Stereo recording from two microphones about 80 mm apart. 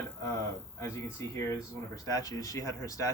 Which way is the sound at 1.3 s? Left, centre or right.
Left.